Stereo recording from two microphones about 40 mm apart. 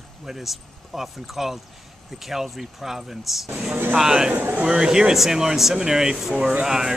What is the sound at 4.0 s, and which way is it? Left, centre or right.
Speech, centre.